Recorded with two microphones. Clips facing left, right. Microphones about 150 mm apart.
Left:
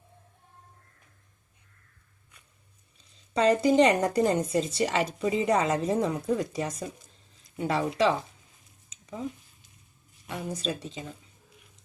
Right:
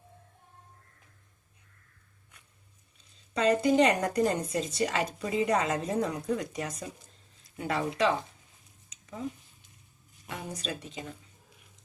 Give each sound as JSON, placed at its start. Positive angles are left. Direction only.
{"t": 3.3, "sound": "a woman's voice", "side_deg": 30}
{"t": 10.2, "sound": "a woman's voice", "side_deg": 30}